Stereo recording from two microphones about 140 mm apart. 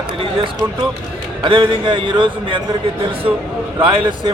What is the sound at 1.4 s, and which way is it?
A man's voice, 35° right (ahead or behind).